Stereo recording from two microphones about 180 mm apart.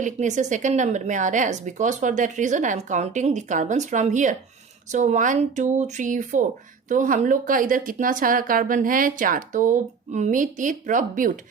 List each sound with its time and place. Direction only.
0.0 s a woman's voice: 40° right (ahead or behind)